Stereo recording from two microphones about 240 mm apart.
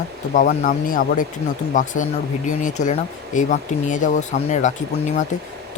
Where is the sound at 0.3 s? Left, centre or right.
Left.